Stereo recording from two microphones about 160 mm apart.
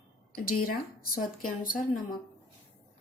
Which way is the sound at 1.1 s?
60° left (ahead or behind).